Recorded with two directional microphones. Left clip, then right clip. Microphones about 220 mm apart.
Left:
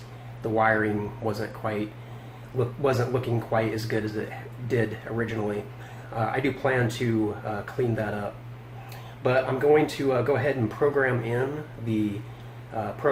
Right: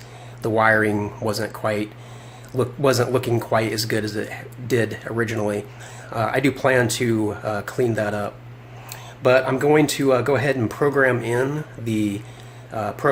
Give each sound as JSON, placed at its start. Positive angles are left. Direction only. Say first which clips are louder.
{"t": 0.4, "sound": "speech", "louder": "right 6 dB", "side_deg": -50}
{"t": 9.2, "sound": "speech", "louder": "right 6 dB", "side_deg": -45}
{"t": 12.7, "sound": "speech", "louder": "right 5 dB", "side_deg": -45}